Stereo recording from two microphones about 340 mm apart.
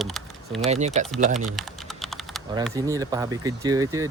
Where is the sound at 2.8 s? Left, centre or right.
Centre.